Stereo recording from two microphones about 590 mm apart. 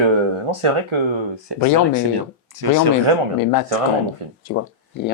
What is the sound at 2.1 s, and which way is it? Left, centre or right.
Speech, right.